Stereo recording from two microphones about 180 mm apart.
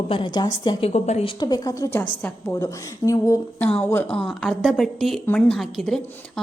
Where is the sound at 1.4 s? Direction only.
25° left (ahead or behind); by 6.0 s centre (ahead or behind).